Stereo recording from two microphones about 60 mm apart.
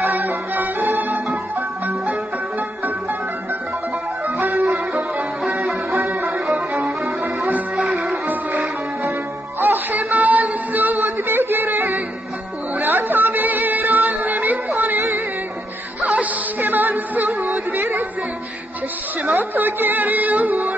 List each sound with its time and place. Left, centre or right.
0.0 s music: right
4.4 s music: right
5.9 s music: right
6.5 s violin: centre
7.7 s music: centre
9.6 s music: right
19.2 s music: right